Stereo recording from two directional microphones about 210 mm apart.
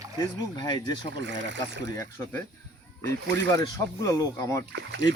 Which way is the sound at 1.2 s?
55° right (ahead or behind).